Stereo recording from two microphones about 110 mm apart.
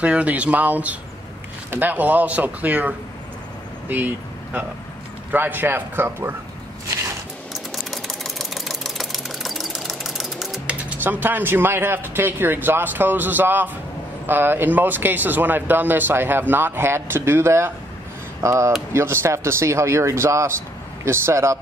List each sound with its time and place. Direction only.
0.0 s speech: 10° right (ahead or behind)
3.9 s speech: 15° right (ahead or behind)
7.5 s a sound: centre (ahead or behind); by 13.7 s 15° right (ahead or behind)
14.2 s speech: 20° right (ahead or behind)